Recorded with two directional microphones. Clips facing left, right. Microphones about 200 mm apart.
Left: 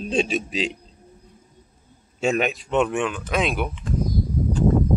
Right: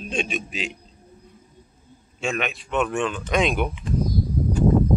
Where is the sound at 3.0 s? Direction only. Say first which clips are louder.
Right 1 dB; 5° left (ahead or behind).